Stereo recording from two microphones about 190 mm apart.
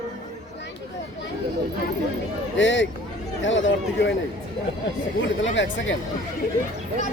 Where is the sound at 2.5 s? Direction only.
75° left (ahead or behind).